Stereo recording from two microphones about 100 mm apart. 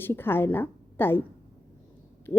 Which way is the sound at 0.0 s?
20° left (ahead or behind).